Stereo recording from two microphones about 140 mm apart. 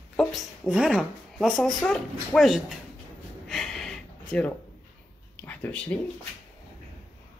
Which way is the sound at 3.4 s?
Centre (ahead or behind).